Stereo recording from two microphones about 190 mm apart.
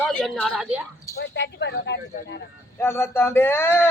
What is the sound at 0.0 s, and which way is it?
Speech, 5° left (ahead or behind).